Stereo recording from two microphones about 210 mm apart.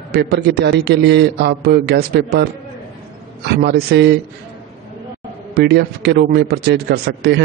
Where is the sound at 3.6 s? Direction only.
50° right (ahead or behind).